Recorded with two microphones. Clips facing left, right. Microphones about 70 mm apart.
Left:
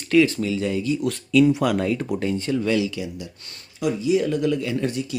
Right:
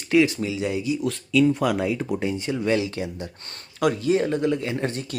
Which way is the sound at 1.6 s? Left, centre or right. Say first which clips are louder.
Left 1 dB; centre.